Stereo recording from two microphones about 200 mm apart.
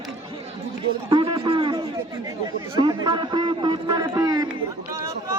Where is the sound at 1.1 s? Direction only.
25° right (ahead or behind).